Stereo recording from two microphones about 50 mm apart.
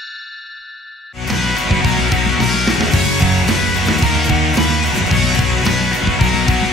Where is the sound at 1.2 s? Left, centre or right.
Centre.